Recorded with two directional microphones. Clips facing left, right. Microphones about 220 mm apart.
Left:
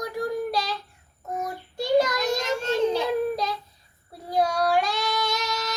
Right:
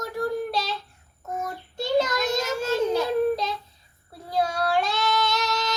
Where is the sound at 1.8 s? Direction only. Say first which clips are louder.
Left 2 dB; 15° left (ahead or behind).